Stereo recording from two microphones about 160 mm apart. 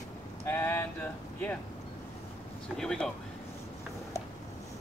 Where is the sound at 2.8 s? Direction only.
5° left (ahead or behind).